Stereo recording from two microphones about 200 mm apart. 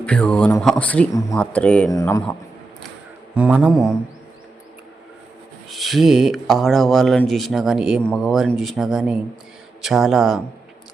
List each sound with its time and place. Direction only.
0.0 s speech: 5° left (ahead or behind)
1.9 s speech: 15° left (ahead or behind)
3.3 s speech: 5° right (ahead or behind)
5.6 s speech: centre (ahead or behind)